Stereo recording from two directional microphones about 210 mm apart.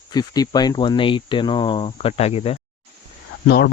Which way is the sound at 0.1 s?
20° left (ahead or behind).